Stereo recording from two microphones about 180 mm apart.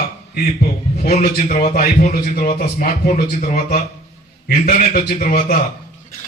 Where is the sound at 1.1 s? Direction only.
45° left (ahead or behind).